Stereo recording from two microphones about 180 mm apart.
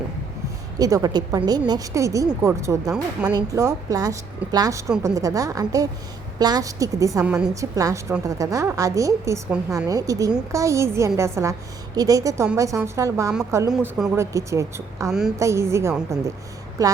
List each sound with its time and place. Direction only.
0.8 s a woman's voice: 20° right (ahead or behind)
13.7 s speech: centre (ahead or behind)
14.2 s a woman's voice: 15° right (ahead or behind)